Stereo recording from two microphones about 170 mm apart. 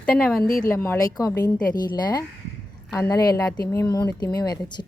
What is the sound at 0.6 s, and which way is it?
Speech, 15° left (ahead or behind).